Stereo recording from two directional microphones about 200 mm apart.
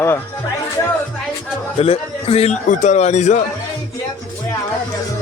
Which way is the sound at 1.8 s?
30° left (ahead or behind).